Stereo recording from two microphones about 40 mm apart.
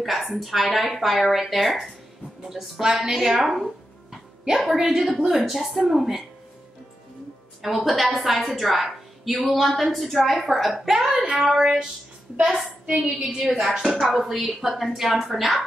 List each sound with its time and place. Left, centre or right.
0.0 s a woman's voice: centre
7.6 s a woman's voice: centre
10.9 s a woman's voice: centre